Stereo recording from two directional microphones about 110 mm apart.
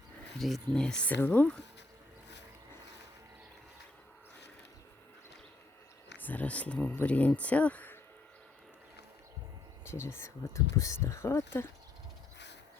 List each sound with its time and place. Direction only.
0.3 s speech: centre (ahead or behind)
6.1 s speech: 15° left (ahead or behind)
9.8 s speech: 25° left (ahead or behind)